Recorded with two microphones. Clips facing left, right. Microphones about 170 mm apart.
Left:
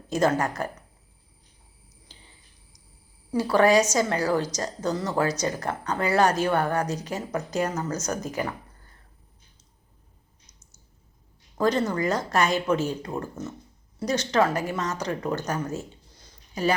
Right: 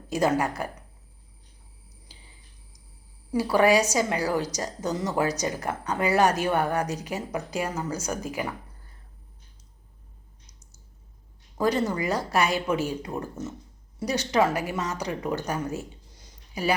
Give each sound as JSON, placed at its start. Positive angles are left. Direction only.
{"t": 0.1, "sound": "speech", "side_deg": -15}
{"t": 3.3, "sound": "speech", "side_deg": -10}
{"t": 11.5, "sound": "speech", "side_deg": -10}
{"t": 16.1, "sound": "a sound", "side_deg": -15}